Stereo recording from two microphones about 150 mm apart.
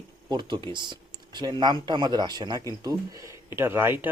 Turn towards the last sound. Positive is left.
turn(degrees=-15)  # may be behind; listen again after turning